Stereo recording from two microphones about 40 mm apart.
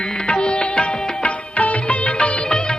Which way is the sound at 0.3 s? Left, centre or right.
Left.